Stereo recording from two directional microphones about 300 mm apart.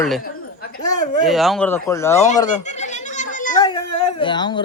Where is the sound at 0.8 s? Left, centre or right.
Left.